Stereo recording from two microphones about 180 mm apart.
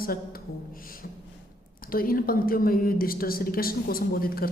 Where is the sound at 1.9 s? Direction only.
55° left (ahead or behind).